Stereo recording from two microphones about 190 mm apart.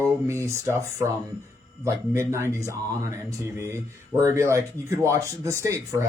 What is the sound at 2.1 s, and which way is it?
Speech, 15° right (ahead or behind).